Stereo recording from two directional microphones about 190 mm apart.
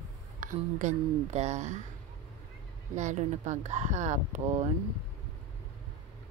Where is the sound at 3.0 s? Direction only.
40° right (ahead or behind).